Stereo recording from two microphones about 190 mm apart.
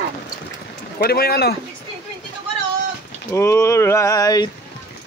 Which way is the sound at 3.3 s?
15° left (ahead or behind).